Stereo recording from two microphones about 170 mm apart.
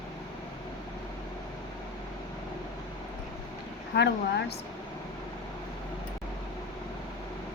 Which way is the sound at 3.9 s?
80° left.